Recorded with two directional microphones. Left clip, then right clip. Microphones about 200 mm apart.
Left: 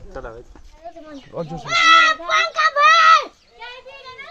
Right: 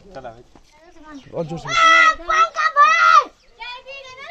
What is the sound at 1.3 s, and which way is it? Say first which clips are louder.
Speech: right 2 dB; 40° right (ahead or behind).